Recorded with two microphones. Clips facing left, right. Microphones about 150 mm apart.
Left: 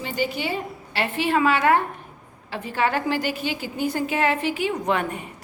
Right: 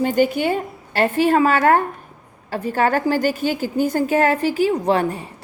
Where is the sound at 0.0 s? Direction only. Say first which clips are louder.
Right 9 dB; 50° right (ahead or behind).